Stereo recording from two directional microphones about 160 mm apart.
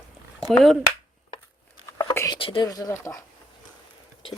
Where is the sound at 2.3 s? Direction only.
35° left (ahead or behind).